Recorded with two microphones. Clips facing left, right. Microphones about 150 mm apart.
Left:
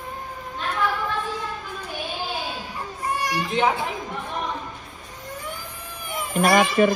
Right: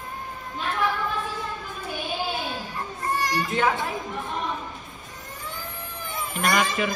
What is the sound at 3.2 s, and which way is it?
Speech, 15° left (ahead or behind).